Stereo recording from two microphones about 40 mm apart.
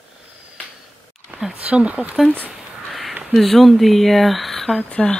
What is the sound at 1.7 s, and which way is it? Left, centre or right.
Speech, right.